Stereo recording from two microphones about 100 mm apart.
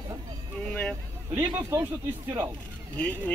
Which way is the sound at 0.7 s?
10° left (ahead or behind).